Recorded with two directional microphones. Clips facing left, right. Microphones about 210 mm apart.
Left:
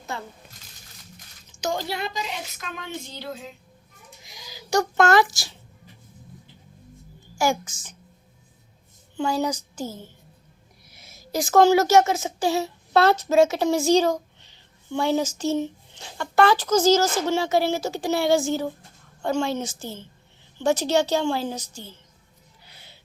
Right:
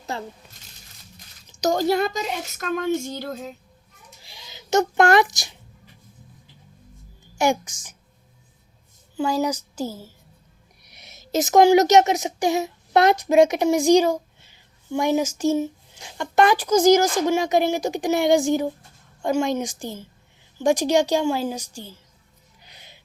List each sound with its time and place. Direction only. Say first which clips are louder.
0.0 s coin: right 3 dB; 35° right (ahead or behind)
1.5 s a woman's voice: right 8 dB; 40° right (ahead or behind)
4.2 s a sound: left 2 dB; 30° right (ahead or behind)
7.3 s speech: right 2 dB; 20° right (ahead or behind)
9.1 s a woman's voice: right 2 dB; 10° right (ahead or behind)
22.6 s music: right 2 dB; 20° right (ahead or behind)